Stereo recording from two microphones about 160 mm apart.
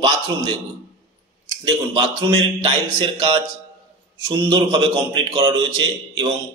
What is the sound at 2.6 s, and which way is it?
Speech, 30° right (ahead or behind).